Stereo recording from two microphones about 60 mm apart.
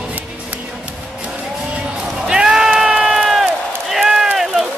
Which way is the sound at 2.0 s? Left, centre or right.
Centre.